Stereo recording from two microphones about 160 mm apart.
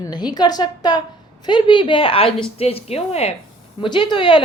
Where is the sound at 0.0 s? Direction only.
25° left (ahead or behind).